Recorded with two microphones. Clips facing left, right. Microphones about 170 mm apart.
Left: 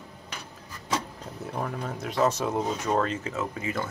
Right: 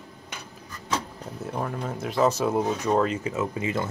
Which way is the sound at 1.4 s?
5° right (ahead or behind).